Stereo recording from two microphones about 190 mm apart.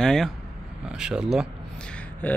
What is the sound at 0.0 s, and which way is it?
Speech, 5° left (ahead or behind).